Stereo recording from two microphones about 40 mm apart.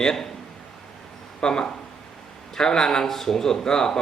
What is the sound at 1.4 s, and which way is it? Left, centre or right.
A man's voice, centre.